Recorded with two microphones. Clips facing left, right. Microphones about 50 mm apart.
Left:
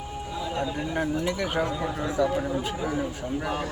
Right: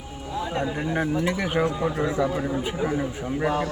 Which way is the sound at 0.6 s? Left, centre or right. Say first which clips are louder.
Right 1 dB; right.